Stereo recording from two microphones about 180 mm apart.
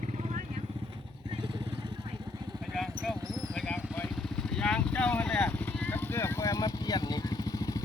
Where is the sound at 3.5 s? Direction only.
5° left (ahead or behind).